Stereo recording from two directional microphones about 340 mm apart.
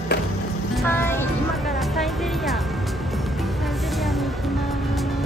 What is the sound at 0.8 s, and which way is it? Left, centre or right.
Music, centre.